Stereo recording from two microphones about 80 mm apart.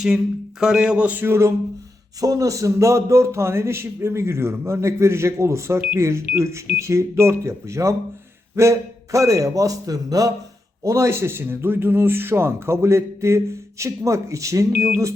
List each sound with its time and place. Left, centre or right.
0.6 s speech: centre
1.2 s speech: right
2.2 s a man's voice: right
10.8 s speech: right